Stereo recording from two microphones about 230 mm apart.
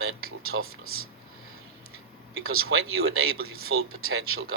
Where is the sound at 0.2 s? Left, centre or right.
Right.